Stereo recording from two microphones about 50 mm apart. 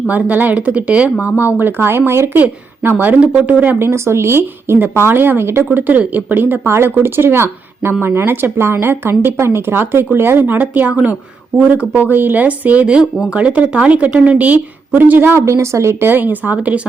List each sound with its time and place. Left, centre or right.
0.1 s speech: right
1.5 s speech: right
2.8 s speech: right
3.8 s speech: right
4.8 s speech: right
5.7 s speech: right
6.5 s speech: right
12.0 s a woman's voice: right
15.3 s speech: right
15.5 s a woman's voice: right
16.0 s speech: right